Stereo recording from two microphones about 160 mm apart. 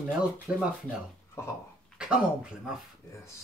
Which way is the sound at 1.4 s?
15° left (ahead or behind).